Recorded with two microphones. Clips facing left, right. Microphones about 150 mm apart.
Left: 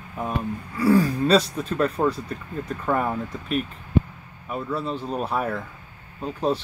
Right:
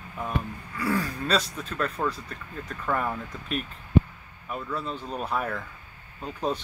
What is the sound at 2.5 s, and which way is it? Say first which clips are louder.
Speech: left 5 dB; 20° left (ahead or behind).